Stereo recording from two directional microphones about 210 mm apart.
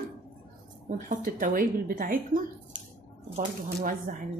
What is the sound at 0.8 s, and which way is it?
Speech, 40° right (ahead or behind).